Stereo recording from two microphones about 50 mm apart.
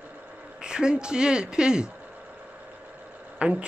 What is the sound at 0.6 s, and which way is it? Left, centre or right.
Speech, centre.